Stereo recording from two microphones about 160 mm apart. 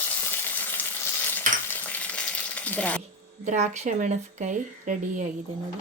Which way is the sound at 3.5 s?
45° right (ahead or behind).